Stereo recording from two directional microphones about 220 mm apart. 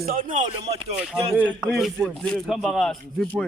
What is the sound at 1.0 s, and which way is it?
Speech, 5° right (ahead or behind).